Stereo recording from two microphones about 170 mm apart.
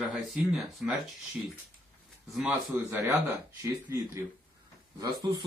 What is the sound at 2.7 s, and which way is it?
Speech, 15° right (ahead or behind).